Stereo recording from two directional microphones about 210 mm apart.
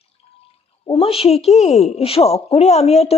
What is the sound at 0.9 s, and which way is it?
A woman's voice, 30° left (ahead or behind).